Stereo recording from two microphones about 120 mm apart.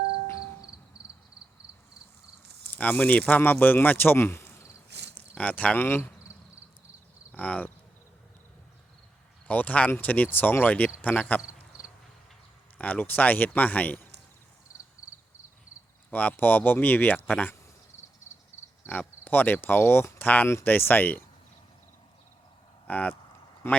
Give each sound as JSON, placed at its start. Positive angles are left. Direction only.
{"t": 0.3, "sound": "music", "side_deg": 25}
{"t": 2.6, "sound": "speech", "side_deg": 15}
{"t": 7.3, "sound": "speech", "side_deg": 15}
{"t": 9.5, "sound": "speech", "side_deg": 15}
{"t": 12.8, "sound": "speech", "side_deg": 15}
{"t": 16.0, "sound": "speech", "side_deg": 15}
{"t": 18.5, "sound": "cricket", "side_deg": 20}
{"t": 18.9, "sound": "speech", "side_deg": 15}
{"t": 22.9, "sound": "a man's voice", "side_deg": 15}